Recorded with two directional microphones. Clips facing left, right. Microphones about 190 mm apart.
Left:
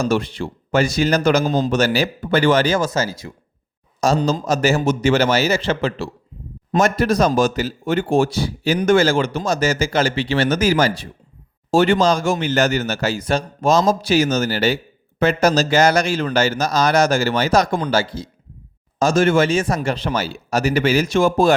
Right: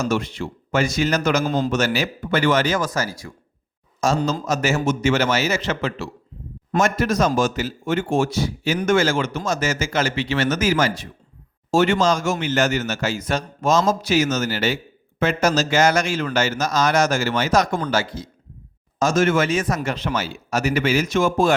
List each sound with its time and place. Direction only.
0.0 s speech: 35° left (ahead or behind)
1.5 s a man's voice: 20° left (ahead or behind)
1.7 s speech: 35° left (ahead or behind)
4.0 s speech: 35° left (ahead or behind)